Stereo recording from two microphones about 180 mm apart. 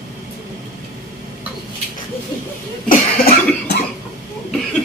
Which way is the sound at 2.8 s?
55° left (ahead or behind).